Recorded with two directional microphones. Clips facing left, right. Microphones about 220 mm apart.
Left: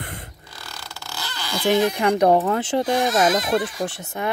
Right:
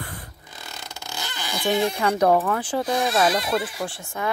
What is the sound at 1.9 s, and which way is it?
Speech, 15° left (ahead or behind).